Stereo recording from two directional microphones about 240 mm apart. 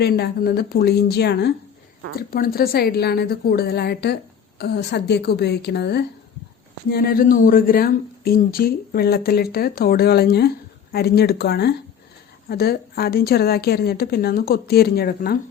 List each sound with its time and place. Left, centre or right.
0.0 s a woman's voice: left